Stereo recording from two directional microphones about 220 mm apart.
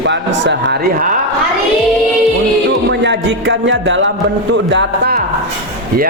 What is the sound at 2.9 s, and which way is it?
A man's voice, 55° right (ahead or behind).